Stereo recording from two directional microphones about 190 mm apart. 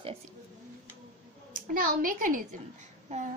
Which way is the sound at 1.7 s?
50° right (ahead or behind).